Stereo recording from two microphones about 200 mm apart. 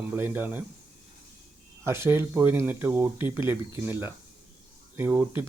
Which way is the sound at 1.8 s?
15° right (ahead or behind).